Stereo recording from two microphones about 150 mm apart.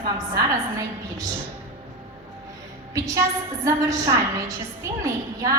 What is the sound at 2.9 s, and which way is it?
A woman's voice, 20° right (ahead or behind).